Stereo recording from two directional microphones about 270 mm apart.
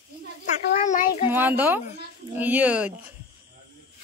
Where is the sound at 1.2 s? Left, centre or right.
Centre.